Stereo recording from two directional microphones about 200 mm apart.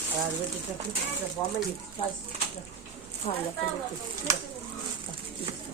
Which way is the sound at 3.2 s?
35° left (ahead or behind).